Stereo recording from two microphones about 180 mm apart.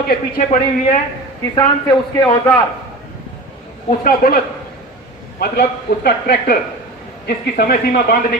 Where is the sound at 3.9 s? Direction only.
55° left (ahead or behind).